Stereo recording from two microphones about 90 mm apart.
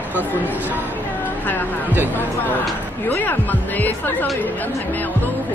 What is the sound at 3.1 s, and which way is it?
Speech, 20° left (ahead or behind).